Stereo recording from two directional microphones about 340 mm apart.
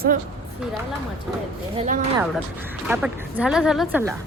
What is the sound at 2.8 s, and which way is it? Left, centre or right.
A woman's voice, centre.